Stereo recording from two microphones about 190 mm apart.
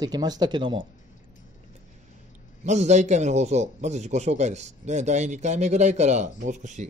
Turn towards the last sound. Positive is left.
turn(degrees=-40)  # may be behind; listen again after turning